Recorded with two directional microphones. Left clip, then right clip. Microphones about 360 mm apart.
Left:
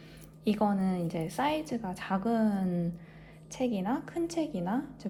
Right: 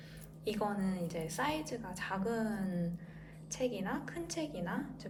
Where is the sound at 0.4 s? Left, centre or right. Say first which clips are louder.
Left 6 dB; centre.